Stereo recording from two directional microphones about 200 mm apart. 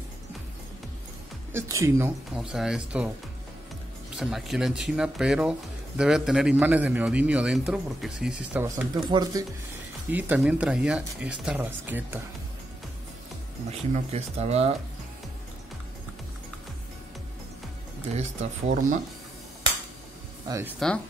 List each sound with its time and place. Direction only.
1.5 s speech: 15° right (ahead or behind)
2.3 s speech: centre (ahead or behind)
4.2 s speech: centre (ahead or behind)
8.6 s speech: 15° right (ahead or behind)
13.7 s speech: 30° right (ahead or behind)
18.1 s speech: 35° right (ahead or behind)
20.4 s speech: 15° right (ahead or behind)